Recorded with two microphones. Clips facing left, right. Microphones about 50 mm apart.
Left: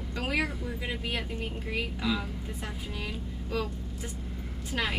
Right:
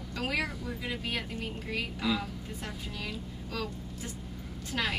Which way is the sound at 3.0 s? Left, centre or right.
Centre.